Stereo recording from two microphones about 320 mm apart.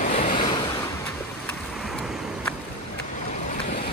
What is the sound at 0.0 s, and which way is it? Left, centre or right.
Waves, left.